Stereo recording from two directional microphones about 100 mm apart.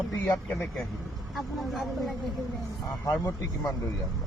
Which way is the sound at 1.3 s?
Centre (ahead or behind).